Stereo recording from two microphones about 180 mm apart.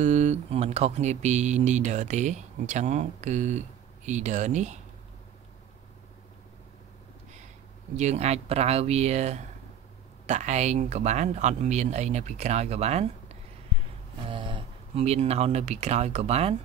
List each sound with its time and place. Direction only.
0.0 s speech: 40° right (ahead or behind)
7.9 s speech: 40° right (ahead or behind)
14.3 s speech: 30° right (ahead or behind)